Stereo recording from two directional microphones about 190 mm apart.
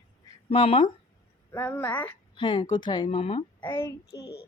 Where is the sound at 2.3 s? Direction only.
25° left (ahead or behind).